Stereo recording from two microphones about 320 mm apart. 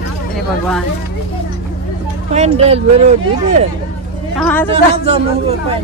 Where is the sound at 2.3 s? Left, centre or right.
Centre.